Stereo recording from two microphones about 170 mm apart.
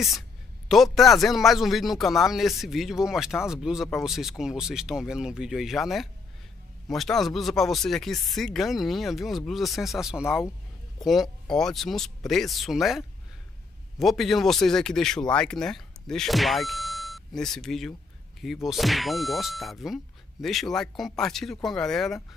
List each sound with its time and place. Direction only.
0.7 s speech: centre (ahead or behind)